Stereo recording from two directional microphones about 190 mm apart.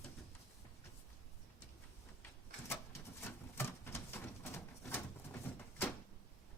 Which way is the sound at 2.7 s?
10° left (ahead or behind).